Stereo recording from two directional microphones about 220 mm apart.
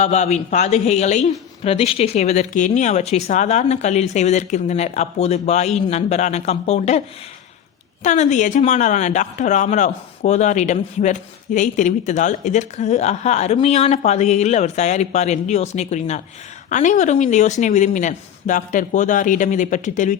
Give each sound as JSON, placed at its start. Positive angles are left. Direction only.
{"t": 0.0, "sound": "speech", "side_deg": 30}
{"t": 8.0, "sound": "speech", "side_deg": 30}